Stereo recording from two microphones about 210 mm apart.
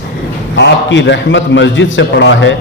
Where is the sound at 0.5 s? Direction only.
60° left (ahead or behind).